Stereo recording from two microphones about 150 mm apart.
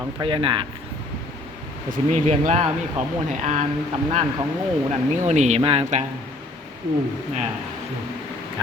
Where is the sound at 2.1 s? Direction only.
55° right (ahead or behind).